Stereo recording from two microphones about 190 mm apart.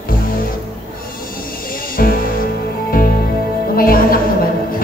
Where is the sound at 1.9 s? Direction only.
50° left (ahead or behind).